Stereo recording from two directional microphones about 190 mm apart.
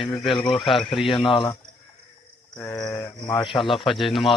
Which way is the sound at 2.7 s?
20° left (ahead or behind).